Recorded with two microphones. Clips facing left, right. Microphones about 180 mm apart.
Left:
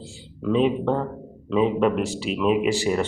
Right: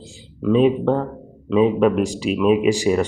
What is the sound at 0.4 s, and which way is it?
Speech, 15° right (ahead or behind).